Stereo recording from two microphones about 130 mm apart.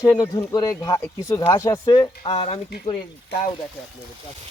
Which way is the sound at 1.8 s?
40° left (ahead or behind).